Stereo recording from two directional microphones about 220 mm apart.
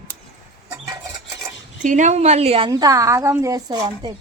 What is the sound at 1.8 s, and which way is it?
Speech, 35° right (ahead or behind).